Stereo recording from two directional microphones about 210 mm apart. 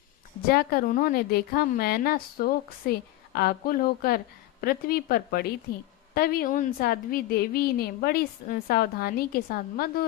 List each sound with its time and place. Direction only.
0.4 s a woman's voice: 45° left (ahead or behind)